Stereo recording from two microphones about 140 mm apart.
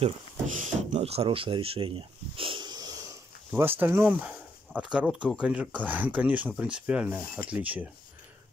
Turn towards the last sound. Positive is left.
turn(degrees=-10)  # may be behind; listen again after turning